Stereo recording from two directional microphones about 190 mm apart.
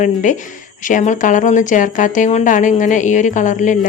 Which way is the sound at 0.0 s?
40° left (ahead or behind).